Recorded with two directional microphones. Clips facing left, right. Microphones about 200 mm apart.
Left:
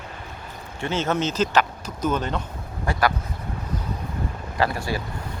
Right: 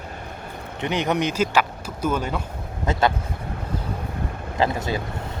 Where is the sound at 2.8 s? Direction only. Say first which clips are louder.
Right 2 dB; 20° right (ahead or behind).